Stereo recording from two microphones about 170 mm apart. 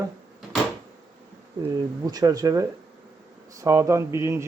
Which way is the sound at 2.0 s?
20° right (ahead or behind).